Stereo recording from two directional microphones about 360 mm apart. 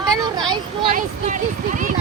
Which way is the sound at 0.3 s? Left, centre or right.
Centre.